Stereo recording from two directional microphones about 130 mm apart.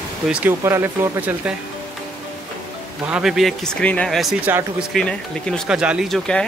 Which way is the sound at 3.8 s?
10° left (ahead or behind).